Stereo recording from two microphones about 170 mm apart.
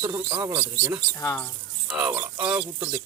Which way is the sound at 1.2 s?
15° left (ahead or behind).